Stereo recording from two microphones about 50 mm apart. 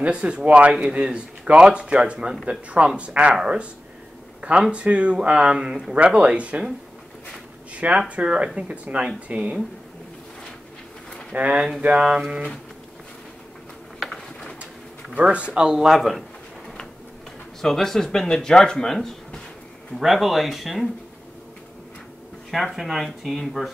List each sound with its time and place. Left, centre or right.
0.0 s speech: right
7.7 s speech: right
11.3 s speech: right
13.9 s pigeon: centre
15.1 s speech: right
16.0 s a sound: centre
17.6 s speech: centre
20.0 s speech: centre
22.5 s speech: centre